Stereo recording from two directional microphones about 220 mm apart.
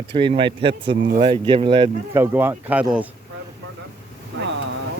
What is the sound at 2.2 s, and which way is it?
Speech, 10° right (ahead or behind).